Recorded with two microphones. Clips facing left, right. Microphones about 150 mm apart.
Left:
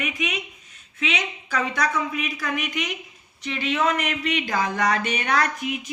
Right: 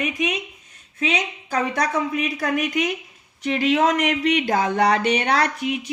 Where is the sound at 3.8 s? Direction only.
90° right.